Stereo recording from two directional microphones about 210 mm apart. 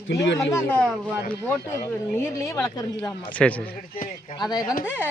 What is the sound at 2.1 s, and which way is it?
Speech, 15° left (ahead or behind).